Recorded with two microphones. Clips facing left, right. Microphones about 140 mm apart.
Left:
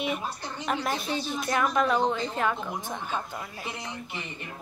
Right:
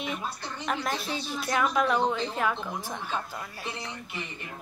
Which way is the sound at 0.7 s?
Centre (ahead or behind).